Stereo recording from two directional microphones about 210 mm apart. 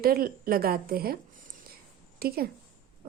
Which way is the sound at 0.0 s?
45° right (ahead or behind).